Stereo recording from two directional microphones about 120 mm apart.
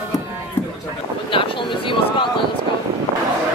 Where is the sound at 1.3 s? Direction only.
45° left (ahead or behind).